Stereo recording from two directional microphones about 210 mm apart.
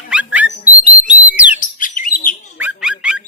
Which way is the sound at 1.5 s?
40° left (ahead or behind).